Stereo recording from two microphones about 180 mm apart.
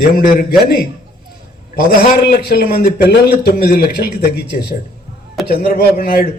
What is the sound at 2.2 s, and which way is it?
A man's voice, 60° left (ahead or behind).